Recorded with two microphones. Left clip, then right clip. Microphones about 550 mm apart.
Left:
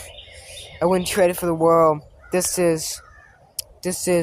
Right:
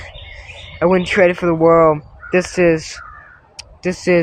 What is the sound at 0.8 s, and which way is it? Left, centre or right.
Speech, left.